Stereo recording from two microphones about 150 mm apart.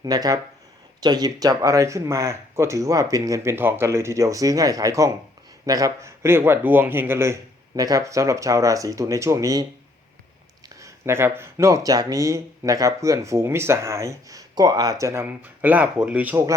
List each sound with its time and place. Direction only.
0.0 s speech: 25° right (ahead or behind)
10.8 s speech: 20° right (ahead or behind)